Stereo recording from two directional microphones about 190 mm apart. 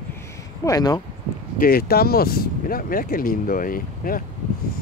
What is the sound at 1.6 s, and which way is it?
Speech, 50° left (ahead or behind).